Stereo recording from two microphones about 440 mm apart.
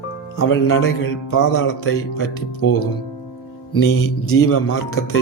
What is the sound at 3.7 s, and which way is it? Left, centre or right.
Music, left.